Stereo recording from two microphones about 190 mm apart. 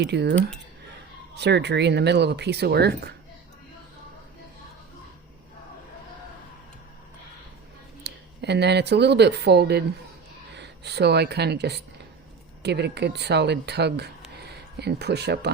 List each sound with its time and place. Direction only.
0.0 s speech: 65° right (ahead or behind)
1.4 s speech: 65° right (ahead or behind)
8.0 s speech: 60° right (ahead or behind)